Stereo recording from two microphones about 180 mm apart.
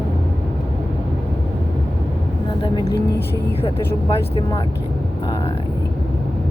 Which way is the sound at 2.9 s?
65° left (ahead or behind).